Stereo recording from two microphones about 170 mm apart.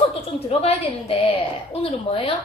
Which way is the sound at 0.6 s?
35° left (ahead or behind).